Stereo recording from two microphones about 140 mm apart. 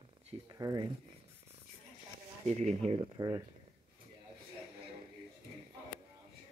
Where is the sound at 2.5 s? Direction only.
50° right (ahead or behind).